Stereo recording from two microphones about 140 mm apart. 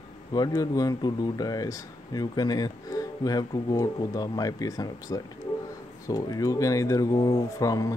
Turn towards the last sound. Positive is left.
turn(degrees=25)  # may be behind; listen again after turning